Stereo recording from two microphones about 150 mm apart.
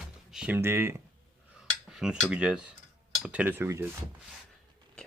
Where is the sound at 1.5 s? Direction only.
5° right (ahead or behind).